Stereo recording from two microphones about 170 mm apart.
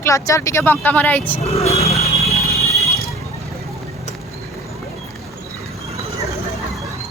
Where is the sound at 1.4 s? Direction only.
40° left (ahead or behind).